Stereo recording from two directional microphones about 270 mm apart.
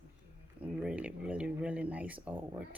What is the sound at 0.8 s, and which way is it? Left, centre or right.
Speech, centre.